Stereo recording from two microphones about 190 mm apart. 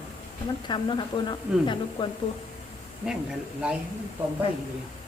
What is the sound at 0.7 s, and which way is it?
Speech, 25° left (ahead or behind).